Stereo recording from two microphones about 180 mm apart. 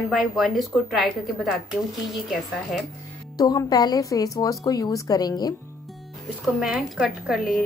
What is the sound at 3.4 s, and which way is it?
A woman's voice, 20° left (ahead or behind).